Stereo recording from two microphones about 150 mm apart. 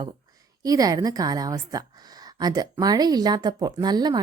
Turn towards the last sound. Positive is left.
turn(degrees=-25)  # may be behind; listen again after turning